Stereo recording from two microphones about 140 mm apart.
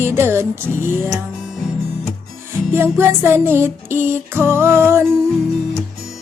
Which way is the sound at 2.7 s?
15° right (ahead or behind).